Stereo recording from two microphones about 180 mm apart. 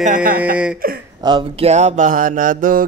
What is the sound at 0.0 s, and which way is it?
Mantra, 50° right (ahead or behind).